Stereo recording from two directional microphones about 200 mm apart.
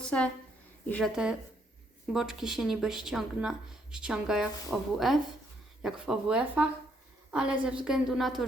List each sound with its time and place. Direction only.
0.0 s a woman's voice: 5° left (ahead or behind)